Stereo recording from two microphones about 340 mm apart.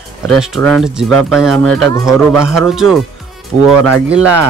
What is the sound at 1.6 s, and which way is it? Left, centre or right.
Speech, right.